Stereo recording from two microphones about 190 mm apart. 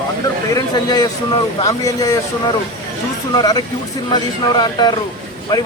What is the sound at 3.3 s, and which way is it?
Speech, 20° left (ahead or behind).